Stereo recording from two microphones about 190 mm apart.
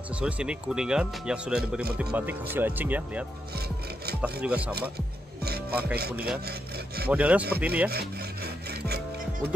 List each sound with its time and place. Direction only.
0.1 s speech: 5° right (ahead or behind)
3.5 s rub: 55° right (ahead or behind)
4.2 s speech: 5° right (ahead or behind)
4.7 s music: 55° right (ahead or behind)
6.1 s speech: 10° right (ahead or behind)
7.9 s rub: 55° right (ahead or behind)